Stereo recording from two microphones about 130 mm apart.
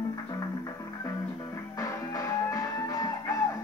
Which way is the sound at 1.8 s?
25° left (ahead or behind).